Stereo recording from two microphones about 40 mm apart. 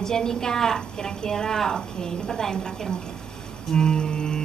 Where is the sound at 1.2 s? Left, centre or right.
Centre.